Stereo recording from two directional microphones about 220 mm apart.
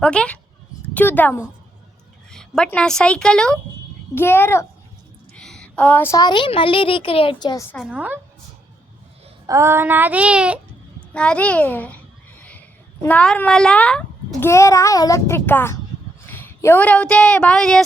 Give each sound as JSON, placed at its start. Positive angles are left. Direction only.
{"t": 0.0, "sound": "a woman's voice", "side_deg": 5}
{"t": 7.7, "sound": "a woman's voice", "side_deg": 0}
{"t": 9.5, "sound": "child singing", "side_deg": -10}
{"t": 11.1, "sound": "a woman's voice", "side_deg": 5}
{"t": 12.4, "sound": "a sound", "side_deg": 5}
{"t": 14.4, "sound": "a child's voice", "side_deg": 15}